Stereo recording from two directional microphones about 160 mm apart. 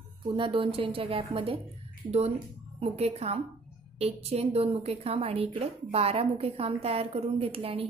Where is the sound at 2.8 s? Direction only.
40° right (ahead or behind).